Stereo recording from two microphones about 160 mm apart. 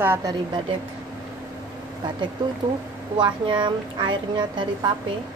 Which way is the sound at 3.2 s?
30° right (ahead or behind).